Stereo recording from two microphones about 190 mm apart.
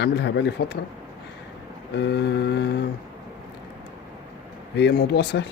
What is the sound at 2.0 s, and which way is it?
Speech, 60° left (ahead or behind).